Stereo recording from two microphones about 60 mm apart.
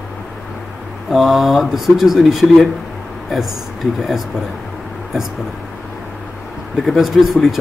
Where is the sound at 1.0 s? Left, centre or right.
Centre.